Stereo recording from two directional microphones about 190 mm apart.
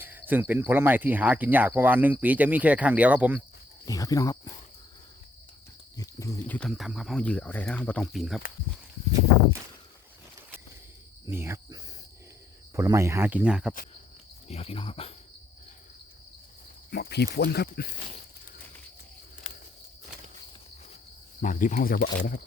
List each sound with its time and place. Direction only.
0.0 s cricket: 10° right (ahead or behind)
3.8 s speech: 20° left (ahead or behind)
6.0 s a sound: 15° left (ahead or behind)
6.6 s speech: centre (ahead or behind)
11.3 s cricket: 15° right (ahead or behind)
14.4 s cricket: 30° left (ahead or behind)
16.9 s speech: 60° left (ahead or behind)
21.4 s speech: 45° left (ahead or behind)